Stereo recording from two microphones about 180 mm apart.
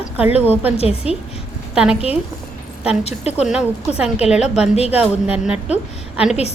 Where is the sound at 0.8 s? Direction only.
35° left (ahead or behind).